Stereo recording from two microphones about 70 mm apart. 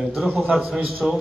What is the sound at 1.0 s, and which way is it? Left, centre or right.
Speech, centre.